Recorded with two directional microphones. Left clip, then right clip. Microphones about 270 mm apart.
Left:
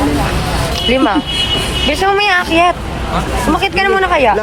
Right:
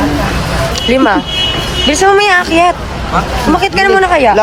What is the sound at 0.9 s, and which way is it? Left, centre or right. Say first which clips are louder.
Speech: right 3 dB; centre.